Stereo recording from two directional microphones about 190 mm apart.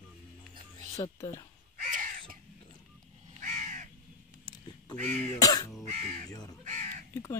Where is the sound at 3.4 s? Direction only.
40° right (ahead or behind).